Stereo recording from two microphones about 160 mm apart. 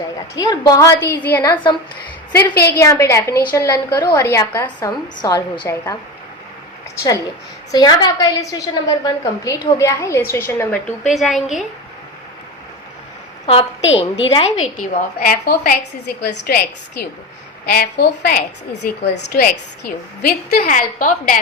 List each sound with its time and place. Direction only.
0.3 s a woman's voice: 25° left (ahead or behind)
2.7 s a woman's voice: 20° left (ahead or behind)
7.7 s a woman's voice: 25° left (ahead or behind)
11.1 s a woman's voice: centre (ahead or behind)
13.5 s a woman's voice: 35° left (ahead or behind)
14.8 s a woman's voice: 65° left (ahead or behind)